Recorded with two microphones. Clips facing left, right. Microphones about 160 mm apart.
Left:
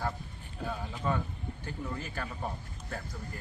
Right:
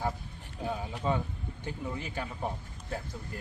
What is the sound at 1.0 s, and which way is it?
Speech, 15° right (ahead or behind).